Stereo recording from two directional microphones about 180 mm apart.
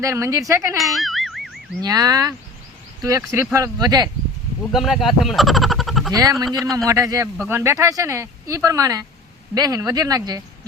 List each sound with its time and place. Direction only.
0.0 s speech: 15° right (ahead or behind)
0.9 s music: centre (ahead or behind)
1.8 s speech: 20° right (ahead or behind)
4.7 s speech: centre (ahead or behind)
6.1 s speech: 20° right (ahead or behind)
6.6 s speech: centre (ahead or behind)
6.8 s speech: 20° right (ahead or behind)